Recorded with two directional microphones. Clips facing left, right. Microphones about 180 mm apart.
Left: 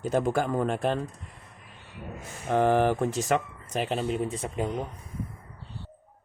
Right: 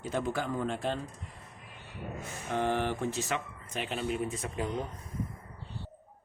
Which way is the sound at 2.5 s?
45° left (ahead or behind).